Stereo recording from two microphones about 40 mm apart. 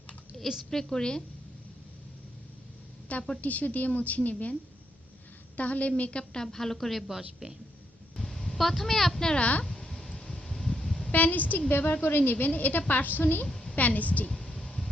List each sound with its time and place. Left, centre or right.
0.6 s a woman's voice: centre
3.1 s a woman's voice: left
5.5 s a woman's voice: left
6.0 s speech: left
6.4 s a woman's voice: centre
8.1 s speech: centre
9.3 s a woman's voice: left
9.6 s a sound: centre
10.5 s vehicle horn: centre
11.1 s a woman's voice: left
12.0 s a woman's voice: left
13.5 s a sound: centre
13.7 s a woman's voice: left
14.4 s a sound: centre